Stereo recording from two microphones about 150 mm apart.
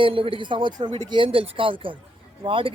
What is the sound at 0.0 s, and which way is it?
Speech, 35° right (ahead or behind).